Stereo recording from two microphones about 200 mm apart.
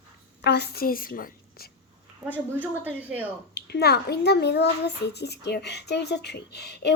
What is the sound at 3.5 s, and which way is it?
A child's voice, 55° left (ahead or behind).